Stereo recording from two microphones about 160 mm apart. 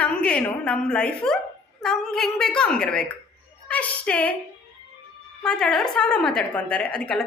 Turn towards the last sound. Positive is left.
turn(degrees=5)  # may be behind; listen again after turning